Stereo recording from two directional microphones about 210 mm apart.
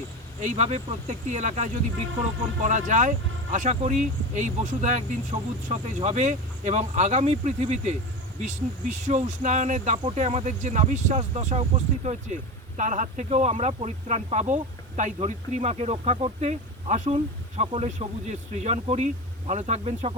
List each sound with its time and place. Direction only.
0.4 s speech: 35° right (ahead or behind)